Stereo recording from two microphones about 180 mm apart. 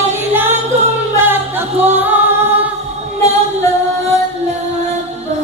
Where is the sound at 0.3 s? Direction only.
10° right (ahead or behind).